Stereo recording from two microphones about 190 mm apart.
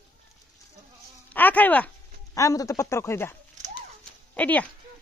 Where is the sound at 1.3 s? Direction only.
10° left (ahead or behind).